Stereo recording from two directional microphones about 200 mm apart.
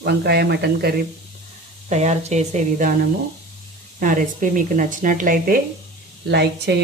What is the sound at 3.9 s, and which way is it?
Speech, 40° right (ahead or behind).